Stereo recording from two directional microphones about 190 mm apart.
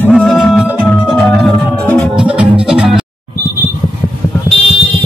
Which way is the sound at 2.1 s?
5° right (ahead or behind).